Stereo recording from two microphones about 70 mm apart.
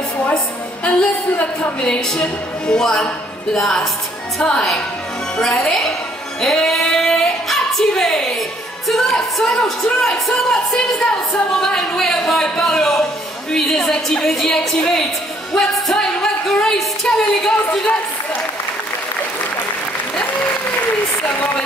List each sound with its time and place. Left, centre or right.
0.8 s a woman's voice: centre
15.5 s a sound: centre
21.2 s speech: left